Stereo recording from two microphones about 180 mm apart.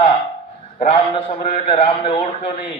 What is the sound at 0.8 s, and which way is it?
A man's voice, 30° left (ahead or behind).